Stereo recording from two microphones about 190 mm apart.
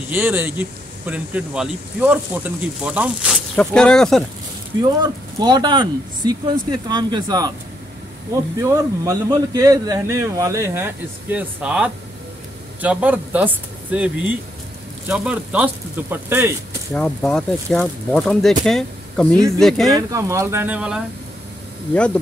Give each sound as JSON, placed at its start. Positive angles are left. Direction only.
{"t": 0.1, "sound": "speech", "side_deg": -10}
{"t": 3.5, "sound": "speech", "side_deg": 5}
{"t": 4.8, "sound": "speech", "side_deg": -20}
{"t": 8.5, "sound": "speech", "side_deg": -15}
{"t": 16.9, "sound": "speech", "side_deg": 5}
{"t": 19.9, "sound": "speech", "side_deg": -20}